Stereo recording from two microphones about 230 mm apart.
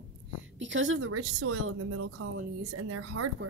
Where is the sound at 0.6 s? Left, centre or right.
Right.